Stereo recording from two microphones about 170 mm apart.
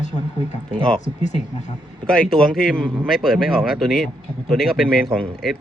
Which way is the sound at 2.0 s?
5° left (ahead or behind).